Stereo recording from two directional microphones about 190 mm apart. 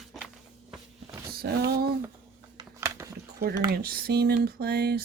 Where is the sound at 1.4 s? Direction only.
55° right (ahead or behind).